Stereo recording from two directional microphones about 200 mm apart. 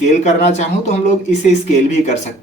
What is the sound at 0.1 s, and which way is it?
Speech, 35° left (ahead or behind).